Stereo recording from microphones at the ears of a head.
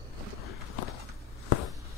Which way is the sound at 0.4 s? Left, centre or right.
Left.